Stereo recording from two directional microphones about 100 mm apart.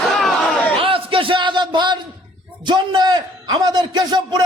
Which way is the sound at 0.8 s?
65° right (ahead or behind).